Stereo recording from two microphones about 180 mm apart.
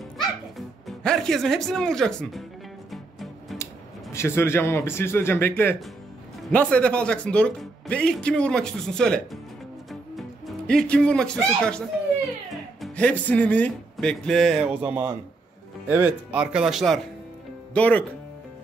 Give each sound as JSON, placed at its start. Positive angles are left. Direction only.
{"t": 0.6, "sound": "speech", "side_deg": 0}
{"t": 2.9, "sound": "music", "side_deg": 0}
{"t": 4.1, "sound": "a man's voice", "side_deg": 15}
{"t": 14.8, "sound": "a man's voice", "side_deg": -10}